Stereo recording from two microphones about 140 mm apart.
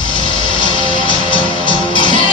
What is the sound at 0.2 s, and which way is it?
Music, 35° left (ahead or behind).